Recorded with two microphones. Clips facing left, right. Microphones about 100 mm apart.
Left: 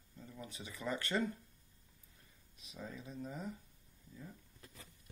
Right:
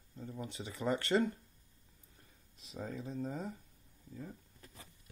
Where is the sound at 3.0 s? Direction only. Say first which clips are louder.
Right 6 dB; 35° right (ahead or behind).